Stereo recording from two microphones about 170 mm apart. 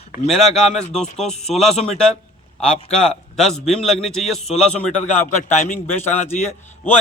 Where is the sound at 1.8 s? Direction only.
5° left (ahead or behind).